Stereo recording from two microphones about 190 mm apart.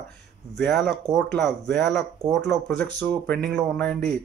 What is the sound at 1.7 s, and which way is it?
Speech, 65° right (ahead or behind).